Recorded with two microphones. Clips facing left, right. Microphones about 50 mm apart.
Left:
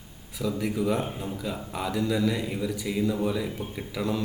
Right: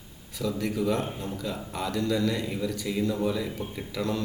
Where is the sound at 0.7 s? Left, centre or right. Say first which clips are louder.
Even; centre.